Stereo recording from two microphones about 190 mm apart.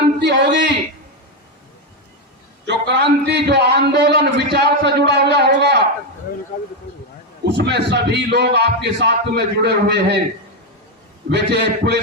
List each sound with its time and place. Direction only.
0.2 s a sound: 65° right (ahead or behind)
2.6 s a man's voice: 65° right (ahead or behind)
7.4 s a man's voice: 65° right (ahead or behind)
11.3 s a man's voice: 65° right (ahead or behind)